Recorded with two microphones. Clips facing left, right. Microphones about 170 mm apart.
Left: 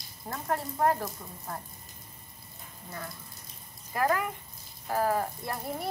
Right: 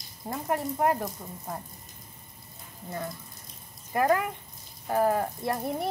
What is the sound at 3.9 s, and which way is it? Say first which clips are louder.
Speech: right 4 dB; 25° right (ahead or behind).